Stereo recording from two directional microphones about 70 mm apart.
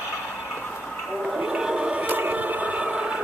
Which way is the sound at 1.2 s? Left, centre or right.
Centre.